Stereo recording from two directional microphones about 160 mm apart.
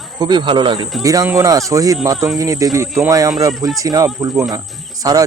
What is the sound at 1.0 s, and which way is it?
Speech, 20° right (ahead or behind).